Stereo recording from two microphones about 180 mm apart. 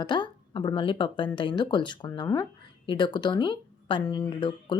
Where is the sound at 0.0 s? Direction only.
25° left (ahead or behind).